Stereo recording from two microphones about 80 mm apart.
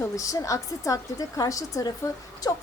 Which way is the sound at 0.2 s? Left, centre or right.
Left.